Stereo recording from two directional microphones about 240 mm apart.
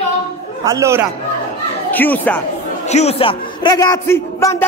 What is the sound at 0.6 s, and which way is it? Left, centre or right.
Speech, centre.